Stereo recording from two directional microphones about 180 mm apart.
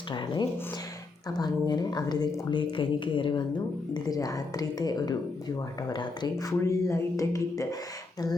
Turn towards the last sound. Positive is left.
turn(degrees=20)  # may be behind; listen again after turning